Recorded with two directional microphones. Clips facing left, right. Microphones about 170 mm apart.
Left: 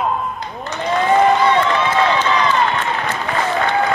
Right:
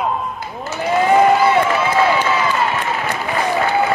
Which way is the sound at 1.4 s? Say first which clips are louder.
Right 1 dB; 5° right (ahead or behind).